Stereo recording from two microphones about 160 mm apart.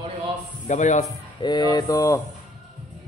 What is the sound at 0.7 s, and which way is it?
Speech, 50° left (ahead or behind).